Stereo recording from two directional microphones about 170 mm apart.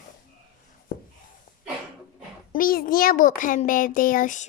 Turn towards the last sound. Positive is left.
turn(degrees=50)  # may be behind; listen again after turning